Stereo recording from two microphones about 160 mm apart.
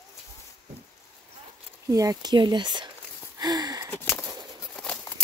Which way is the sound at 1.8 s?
20° right (ahead or behind).